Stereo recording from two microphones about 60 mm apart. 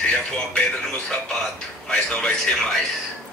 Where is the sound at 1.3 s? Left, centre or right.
Centre.